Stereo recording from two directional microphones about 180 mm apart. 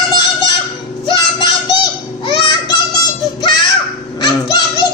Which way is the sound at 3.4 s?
25° left (ahead or behind).